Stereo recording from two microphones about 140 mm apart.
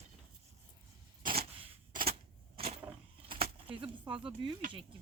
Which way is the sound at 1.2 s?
90° right.